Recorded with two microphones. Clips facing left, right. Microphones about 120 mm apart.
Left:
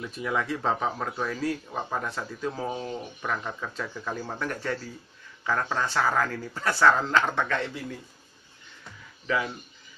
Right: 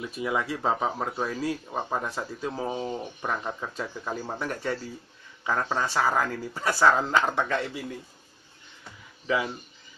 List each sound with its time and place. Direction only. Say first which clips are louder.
0.0 s speech: right 1 dB; 15° right (ahead or behind)